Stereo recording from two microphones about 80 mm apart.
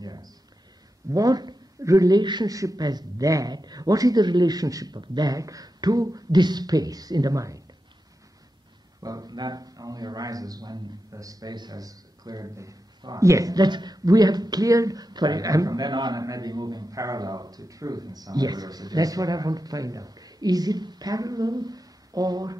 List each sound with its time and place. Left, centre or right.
0.0 s speech: right
2.5 s speech: right
9.0 s speech: right